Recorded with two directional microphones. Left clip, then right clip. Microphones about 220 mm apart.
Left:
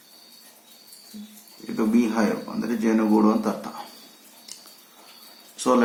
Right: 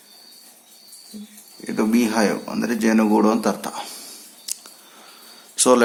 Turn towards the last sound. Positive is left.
turn(degrees=-50)  # may be behind; listen again after turning